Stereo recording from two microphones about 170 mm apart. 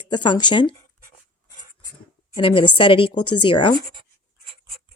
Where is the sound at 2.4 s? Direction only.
30° left (ahead or behind).